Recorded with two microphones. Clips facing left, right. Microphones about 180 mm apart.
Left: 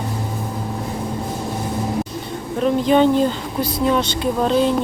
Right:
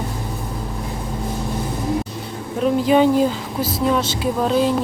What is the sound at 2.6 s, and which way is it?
Speech, 5° right (ahead or behind).